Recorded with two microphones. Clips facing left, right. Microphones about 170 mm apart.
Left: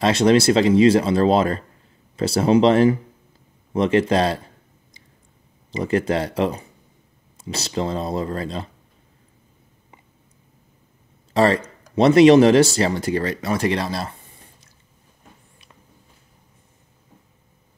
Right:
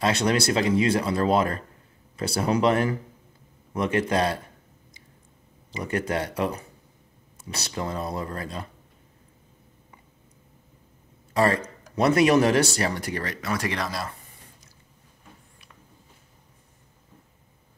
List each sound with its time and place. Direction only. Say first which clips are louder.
0.0 s speech: left 7 dB; 20° left (ahead or behind)
5.9 s speech: left 6 dB; 25° left (ahead or behind)
11.3 s speech: left 5 dB; 30° left (ahead or behind)